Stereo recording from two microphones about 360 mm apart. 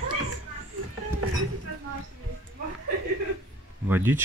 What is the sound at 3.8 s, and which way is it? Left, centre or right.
Speech, centre.